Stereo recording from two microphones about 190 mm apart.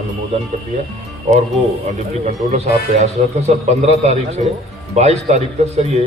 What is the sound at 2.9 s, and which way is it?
A man's voice, 35° right (ahead or behind).